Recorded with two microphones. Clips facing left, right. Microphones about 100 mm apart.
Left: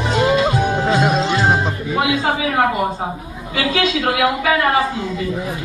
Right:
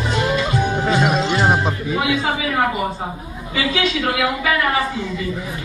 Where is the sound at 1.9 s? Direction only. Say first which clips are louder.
Left 4 dB; 55° left (ahead or behind).